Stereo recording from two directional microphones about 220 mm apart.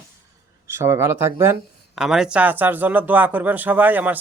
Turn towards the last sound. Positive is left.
turn(degrees=-10)  # may be behind; listen again after turning